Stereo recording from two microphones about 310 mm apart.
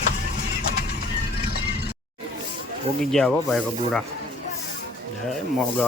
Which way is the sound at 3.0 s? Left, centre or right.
Centre.